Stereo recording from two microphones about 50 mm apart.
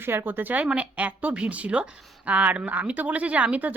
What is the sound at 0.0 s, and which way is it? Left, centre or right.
Speech, right.